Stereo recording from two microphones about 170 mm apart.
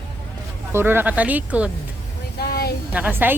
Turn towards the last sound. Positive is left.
turn(degrees=-10)  # may be behind; listen again after turning